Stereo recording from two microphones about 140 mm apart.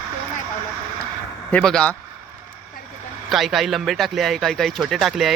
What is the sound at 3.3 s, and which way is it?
Speech, centre (ahead or behind).